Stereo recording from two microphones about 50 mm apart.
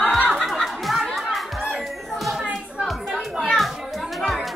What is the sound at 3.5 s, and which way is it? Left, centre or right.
Children playing, centre.